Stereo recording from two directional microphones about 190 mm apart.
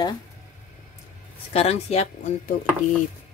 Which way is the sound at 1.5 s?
35° left (ahead or behind).